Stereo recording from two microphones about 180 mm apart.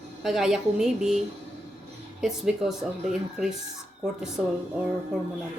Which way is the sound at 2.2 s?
Centre (ahead or behind).